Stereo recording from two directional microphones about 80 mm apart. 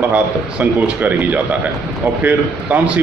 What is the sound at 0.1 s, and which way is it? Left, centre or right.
A man's voice, centre.